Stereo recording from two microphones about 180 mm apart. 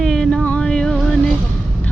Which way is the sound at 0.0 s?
5° left (ahead or behind).